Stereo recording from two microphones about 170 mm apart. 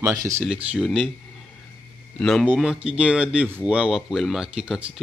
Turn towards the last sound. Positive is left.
turn(degrees=-5)  # may be behind; listen again after turning